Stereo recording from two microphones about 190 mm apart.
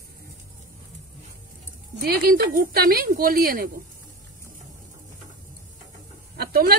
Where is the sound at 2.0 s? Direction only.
50° right (ahead or behind).